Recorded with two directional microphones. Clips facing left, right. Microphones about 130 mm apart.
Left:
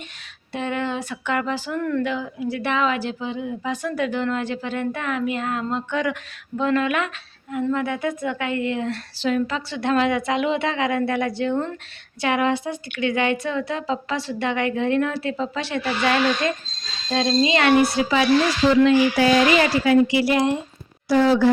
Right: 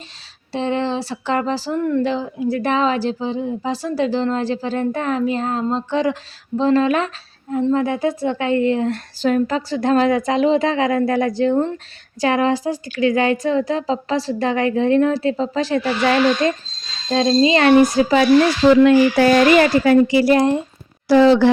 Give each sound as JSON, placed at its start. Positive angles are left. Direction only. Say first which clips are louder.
{"t": 0.5, "sound": "a woman's voice", "louder": "right 5 dB", "side_deg": -30}
{"t": 18.7, "sound": "speech", "louder": "right 5 dB", "side_deg": -55}
{"t": 21.1, "sound": "speech", "louder": "right 5 dB", "side_deg": -80}